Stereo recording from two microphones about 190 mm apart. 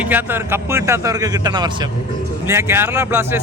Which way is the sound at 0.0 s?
10° right (ahead or behind).